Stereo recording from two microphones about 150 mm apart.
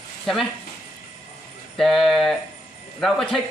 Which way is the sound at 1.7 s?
Centre (ahead or behind).